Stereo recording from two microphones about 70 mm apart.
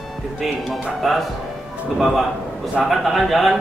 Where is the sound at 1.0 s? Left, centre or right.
Centre.